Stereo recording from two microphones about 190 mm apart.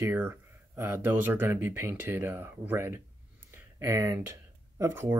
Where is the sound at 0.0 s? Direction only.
10° right (ahead or behind).